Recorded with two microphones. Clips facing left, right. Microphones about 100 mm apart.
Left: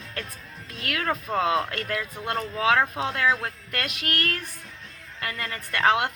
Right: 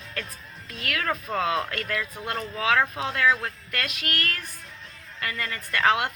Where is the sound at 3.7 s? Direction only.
25° left (ahead or behind).